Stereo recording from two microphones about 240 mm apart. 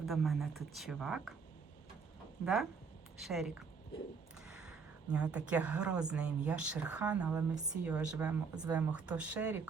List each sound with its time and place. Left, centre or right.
0.0 s speech: centre
2.4 s speech: centre
4.4 s a sound: centre
5.1 s speech: centre